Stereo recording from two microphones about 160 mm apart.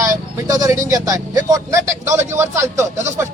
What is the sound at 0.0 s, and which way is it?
Speech, 25° right (ahead or behind).